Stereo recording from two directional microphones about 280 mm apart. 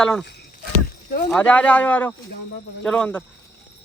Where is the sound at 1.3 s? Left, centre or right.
Centre.